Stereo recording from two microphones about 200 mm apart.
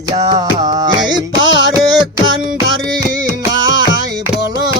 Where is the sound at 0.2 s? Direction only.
20° right (ahead or behind).